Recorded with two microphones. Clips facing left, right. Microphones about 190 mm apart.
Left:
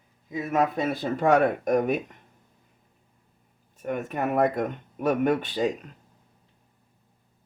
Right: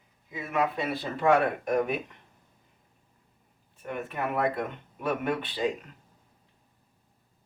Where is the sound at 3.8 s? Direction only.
45° left (ahead or behind).